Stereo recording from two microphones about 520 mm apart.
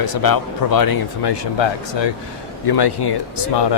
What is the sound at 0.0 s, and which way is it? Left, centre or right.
Speech, left.